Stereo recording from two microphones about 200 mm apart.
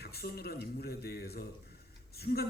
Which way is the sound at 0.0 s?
50° left (ahead or behind).